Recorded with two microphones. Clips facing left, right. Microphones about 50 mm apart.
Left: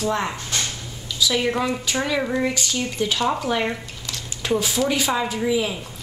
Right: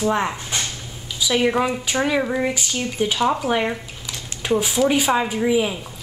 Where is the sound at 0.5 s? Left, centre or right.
Centre.